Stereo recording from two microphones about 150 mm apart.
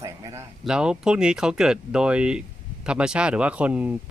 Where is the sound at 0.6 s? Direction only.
5° right (ahead or behind).